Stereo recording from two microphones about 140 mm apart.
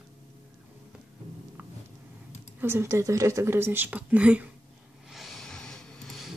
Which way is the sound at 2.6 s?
20° right (ahead or behind).